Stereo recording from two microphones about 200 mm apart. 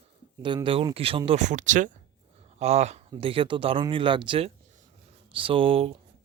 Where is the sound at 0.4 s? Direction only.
25° right (ahead or behind).